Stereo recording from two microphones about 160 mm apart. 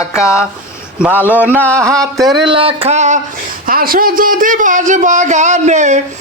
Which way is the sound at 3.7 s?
65° right (ahead or behind).